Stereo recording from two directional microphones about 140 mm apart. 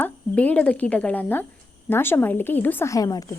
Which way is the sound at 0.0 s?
10° left (ahead or behind).